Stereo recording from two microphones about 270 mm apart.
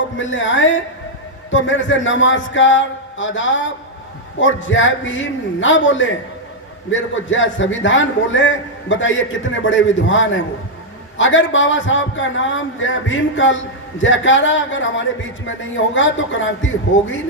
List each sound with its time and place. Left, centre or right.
0.2 s a man's voice: left